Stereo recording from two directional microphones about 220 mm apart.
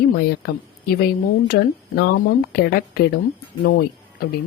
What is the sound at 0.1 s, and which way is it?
Speech, 45° left (ahead or behind).